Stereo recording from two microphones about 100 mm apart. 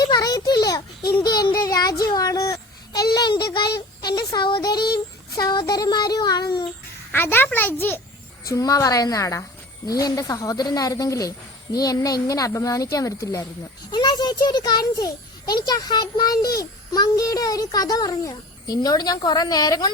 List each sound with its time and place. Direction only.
0.0 s a child's voice: 40° left (ahead or behind)
4.0 s speech: 35° left (ahead or behind)
4.4 s child singing: 50° left (ahead or behind)
5.3 s a child's voice: 45° left (ahead or behind)
7.1 s a child's voice: 20° left (ahead or behind)
8.4 s a child's voice: 35° left (ahead or behind)
13.9 s a child's voice: 45° left (ahead or behind)